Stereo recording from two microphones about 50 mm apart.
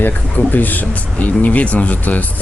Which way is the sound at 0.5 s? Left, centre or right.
Left.